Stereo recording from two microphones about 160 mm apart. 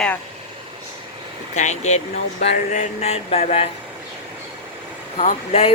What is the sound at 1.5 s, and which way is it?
Speech, 45° left (ahead or behind).